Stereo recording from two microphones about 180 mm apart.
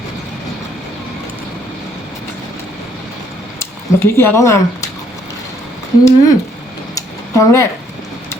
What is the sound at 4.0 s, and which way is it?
Speech, 15° left (ahead or behind).